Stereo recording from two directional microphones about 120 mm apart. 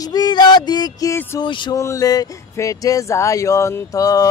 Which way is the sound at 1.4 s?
40° left (ahead or behind).